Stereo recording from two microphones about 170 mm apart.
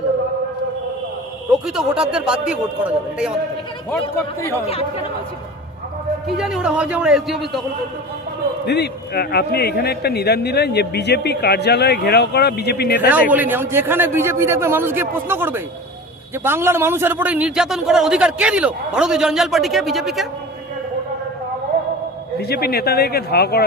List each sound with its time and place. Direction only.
1.5 s a man's voice: 5° right (ahead or behind)
4.6 s speech: 35° left (ahead or behind)
6.2 s a man's voice: centre (ahead or behind)
8.6 s a man's voice: 75° left (ahead or behind)
13.1 s a man's voice: 10° right (ahead or behind)
22.4 s a man's voice: 65° left (ahead or behind)